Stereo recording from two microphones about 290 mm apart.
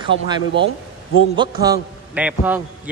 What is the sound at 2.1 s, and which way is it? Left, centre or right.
Speech, centre.